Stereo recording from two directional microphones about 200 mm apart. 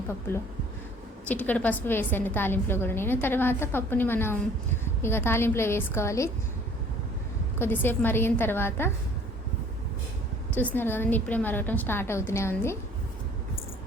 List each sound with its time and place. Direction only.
1.3 s a woman's voice: 5° left (ahead or behind)
7.6 s a woman's voice: 10° left (ahead or behind)
10.8 s a woman's voice: 10° left (ahead or behind)